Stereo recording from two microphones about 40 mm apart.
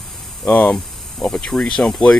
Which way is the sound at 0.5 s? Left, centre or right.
Left.